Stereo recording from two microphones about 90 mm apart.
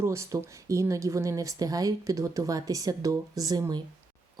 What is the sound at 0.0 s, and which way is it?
Speech, 35° right (ahead or behind).